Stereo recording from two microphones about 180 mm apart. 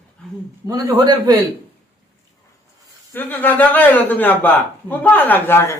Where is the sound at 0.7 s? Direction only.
20° right (ahead or behind).